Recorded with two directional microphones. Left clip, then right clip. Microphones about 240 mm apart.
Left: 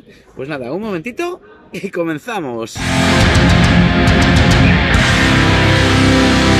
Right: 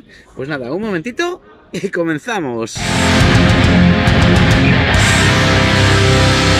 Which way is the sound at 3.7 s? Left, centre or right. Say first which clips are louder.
Even; centre.